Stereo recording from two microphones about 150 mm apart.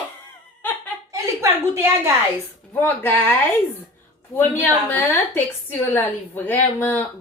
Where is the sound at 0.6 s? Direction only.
15° left (ahead or behind).